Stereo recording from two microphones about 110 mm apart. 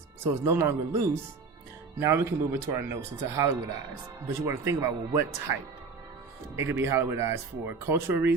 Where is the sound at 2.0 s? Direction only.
25° right (ahead or behind).